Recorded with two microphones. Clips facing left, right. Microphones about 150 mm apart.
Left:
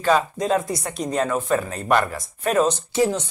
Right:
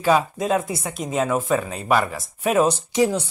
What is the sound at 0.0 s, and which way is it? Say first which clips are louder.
Speech: right 1 dB; 5° right (ahead or behind).